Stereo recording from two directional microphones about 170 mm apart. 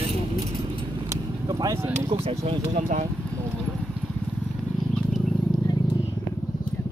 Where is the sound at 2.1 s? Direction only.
30° right (ahead or behind).